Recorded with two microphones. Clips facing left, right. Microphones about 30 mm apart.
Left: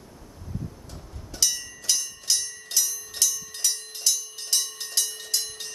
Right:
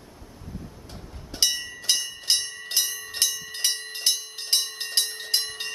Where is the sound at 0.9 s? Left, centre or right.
Right.